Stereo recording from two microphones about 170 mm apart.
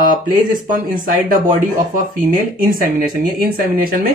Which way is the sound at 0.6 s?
55° right (ahead or behind).